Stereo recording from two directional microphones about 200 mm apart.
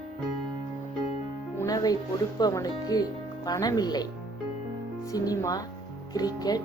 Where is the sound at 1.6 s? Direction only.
20° left (ahead or behind).